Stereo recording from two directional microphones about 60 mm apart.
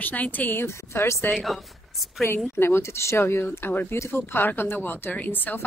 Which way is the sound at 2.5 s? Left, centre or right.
Left.